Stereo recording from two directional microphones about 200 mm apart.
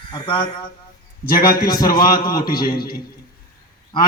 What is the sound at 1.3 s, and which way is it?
Speech, 45° left (ahead or behind).